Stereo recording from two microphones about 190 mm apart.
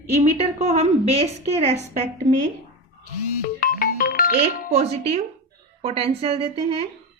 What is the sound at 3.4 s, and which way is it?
Music, 50° left (ahead or behind).